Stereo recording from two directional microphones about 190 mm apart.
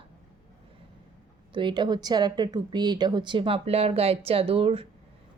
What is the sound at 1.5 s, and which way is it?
Speech, 25° right (ahead or behind).